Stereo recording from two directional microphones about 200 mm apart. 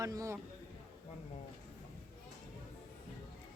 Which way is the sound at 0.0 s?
15° right (ahead or behind).